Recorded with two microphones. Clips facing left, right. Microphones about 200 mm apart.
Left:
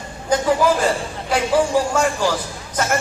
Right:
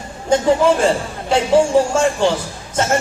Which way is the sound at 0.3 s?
25° right (ahead or behind).